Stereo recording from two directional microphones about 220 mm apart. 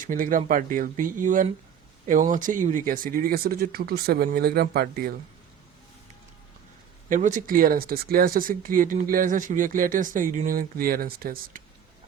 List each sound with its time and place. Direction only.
0.0 s speech: 40° right (ahead or behind)
7.1 s speech: 35° right (ahead or behind)